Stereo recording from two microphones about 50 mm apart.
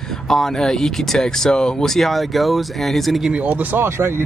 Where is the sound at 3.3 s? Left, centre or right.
Right.